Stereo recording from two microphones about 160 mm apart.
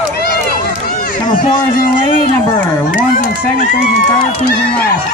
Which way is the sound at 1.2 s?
30° left (ahead or behind).